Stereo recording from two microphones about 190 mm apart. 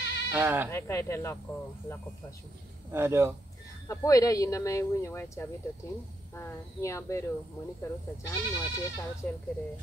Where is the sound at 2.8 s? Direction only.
15° right (ahead or behind).